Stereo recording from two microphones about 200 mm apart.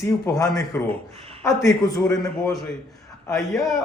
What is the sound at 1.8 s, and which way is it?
Speech, 15° left (ahead or behind).